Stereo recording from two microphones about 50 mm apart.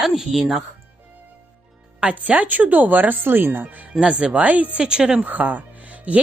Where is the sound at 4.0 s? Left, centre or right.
Centre.